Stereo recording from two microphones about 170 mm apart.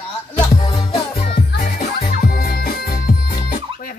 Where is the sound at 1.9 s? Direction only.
60° left (ahead or behind).